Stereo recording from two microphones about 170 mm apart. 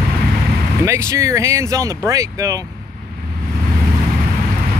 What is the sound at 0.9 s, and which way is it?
Speech, 15° right (ahead or behind).